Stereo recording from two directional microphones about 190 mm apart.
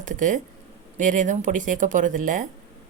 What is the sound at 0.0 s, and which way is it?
Speech, 40° right (ahead or behind).